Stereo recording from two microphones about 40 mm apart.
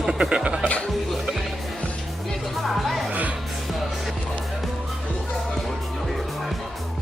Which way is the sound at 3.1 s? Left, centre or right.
Right.